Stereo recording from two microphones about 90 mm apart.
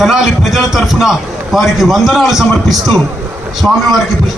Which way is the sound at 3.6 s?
10° left (ahead or behind).